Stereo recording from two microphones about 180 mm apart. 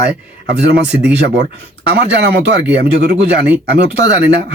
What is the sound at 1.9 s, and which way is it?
Speech, 70° right (ahead or behind).